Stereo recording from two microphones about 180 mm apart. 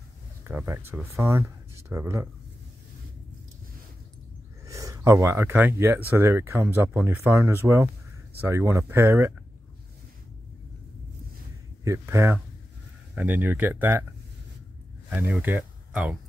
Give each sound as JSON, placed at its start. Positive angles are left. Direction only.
{"t": 0.4, "sound": "speech", "side_deg": -10}
{"t": 4.6, "sound": "speech", "side_deg": -20}
{"t": 11.8, "sound": "speech", "side_deg": -15}
{"t": 15.0, "sound": "speech", "side_deg": -10}